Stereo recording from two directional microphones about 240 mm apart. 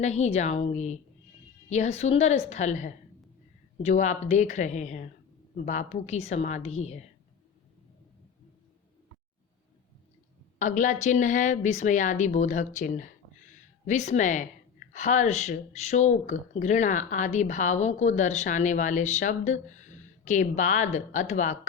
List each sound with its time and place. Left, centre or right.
0.0 s a woman's voice: left
10.6 s speech: left